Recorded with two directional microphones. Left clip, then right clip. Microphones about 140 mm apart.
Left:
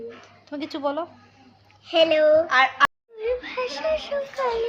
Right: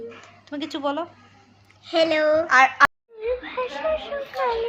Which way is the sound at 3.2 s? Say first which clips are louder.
Even; 25° left (ahead or behind).